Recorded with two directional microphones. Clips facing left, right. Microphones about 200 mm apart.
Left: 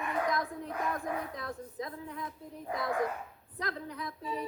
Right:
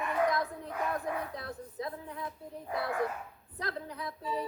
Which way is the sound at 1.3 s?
30° right (ahead or behind).